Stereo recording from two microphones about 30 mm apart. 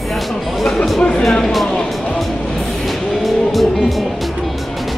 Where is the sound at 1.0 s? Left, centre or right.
Left.